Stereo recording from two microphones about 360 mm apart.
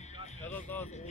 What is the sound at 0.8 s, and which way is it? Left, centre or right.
Speech, centre.